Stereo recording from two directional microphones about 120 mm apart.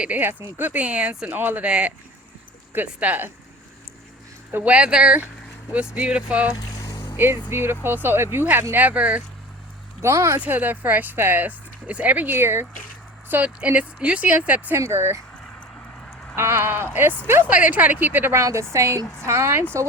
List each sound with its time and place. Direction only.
0.0 s speech: 15° right (ahead or behind)
4.5 s speech: 10° right (ahead or behind)
6.7 s vehicle: 30° left (ahead or behind)
7.5 s a woman's voice: 20° right (ahead or behind)
10.0 s a woman's voice: 25° right (ahead or behind)
16.3 s a woman's voice: 20° right (ahead or behind)